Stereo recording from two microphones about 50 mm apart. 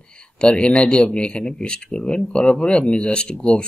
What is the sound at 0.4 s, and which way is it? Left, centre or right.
A man's voice, left.